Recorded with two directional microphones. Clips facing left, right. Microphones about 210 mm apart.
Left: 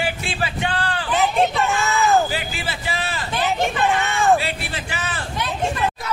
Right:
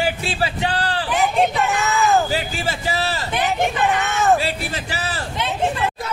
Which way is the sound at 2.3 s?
40° right (ahead or behind).